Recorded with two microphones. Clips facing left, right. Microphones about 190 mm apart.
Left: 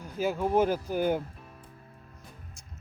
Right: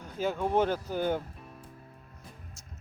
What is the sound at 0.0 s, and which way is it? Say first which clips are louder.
Speech: left 2 dB; 10° left (ahead or behind).